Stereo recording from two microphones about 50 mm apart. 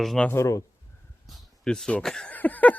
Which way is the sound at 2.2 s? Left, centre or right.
Left.